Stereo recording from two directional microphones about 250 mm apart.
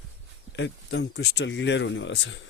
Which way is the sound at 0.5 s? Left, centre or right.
Left.